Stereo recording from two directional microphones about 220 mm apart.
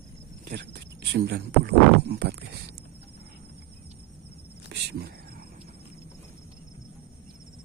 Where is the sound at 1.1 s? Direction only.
50° right (ahead or behind).